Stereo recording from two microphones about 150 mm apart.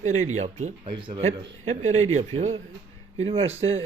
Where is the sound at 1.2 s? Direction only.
55° right (ahead or behind).